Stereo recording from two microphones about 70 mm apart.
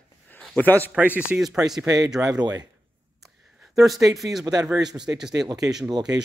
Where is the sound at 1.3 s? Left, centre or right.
Right.